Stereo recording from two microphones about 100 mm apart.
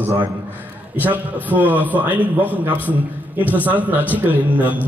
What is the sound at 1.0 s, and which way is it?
A man's voice, 15° right (ahead or behind).